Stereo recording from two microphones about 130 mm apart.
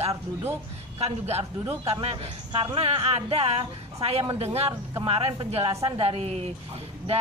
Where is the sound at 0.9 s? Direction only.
50° right (ahead or behind).